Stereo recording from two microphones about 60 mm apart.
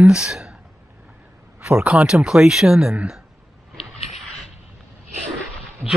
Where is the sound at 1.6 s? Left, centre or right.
Right.